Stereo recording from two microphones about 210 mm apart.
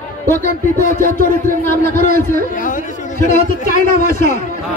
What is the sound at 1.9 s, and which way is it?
A man's voice, 35° left (ahead or behind).